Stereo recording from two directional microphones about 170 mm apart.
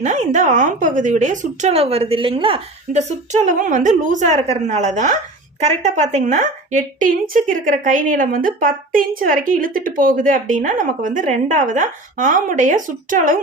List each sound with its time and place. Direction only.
0.0 s a woman's voice: 45° right (ahead or behind)